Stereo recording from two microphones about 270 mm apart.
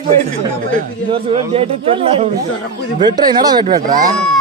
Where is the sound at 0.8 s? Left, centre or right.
Right.